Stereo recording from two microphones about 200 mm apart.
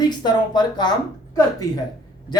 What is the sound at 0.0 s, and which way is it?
Speech, 20° left (ahead or behind).